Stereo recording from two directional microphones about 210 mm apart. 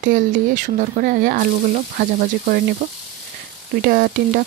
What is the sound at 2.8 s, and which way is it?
Speech, 40° right (ahead or behind).